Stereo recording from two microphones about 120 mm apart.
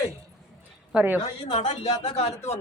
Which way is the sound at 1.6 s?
65° left (ahead or behind).